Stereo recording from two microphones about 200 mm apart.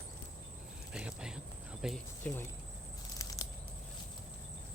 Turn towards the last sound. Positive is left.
turn(degrees=15)  # may be behind; listen again after turning